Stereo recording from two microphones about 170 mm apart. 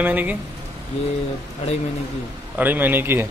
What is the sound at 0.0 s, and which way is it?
Speech, 10° right (ahead or behind).